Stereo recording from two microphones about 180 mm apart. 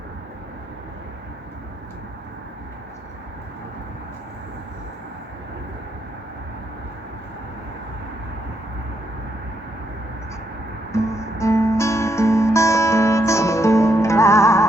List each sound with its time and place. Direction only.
10.9 s guitar: 15° left (ahead or behind)